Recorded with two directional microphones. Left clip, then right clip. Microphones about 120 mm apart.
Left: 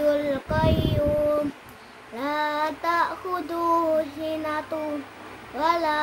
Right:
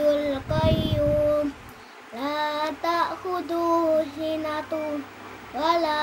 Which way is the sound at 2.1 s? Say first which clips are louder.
Left 1 dB; 15° left (ahead or behind).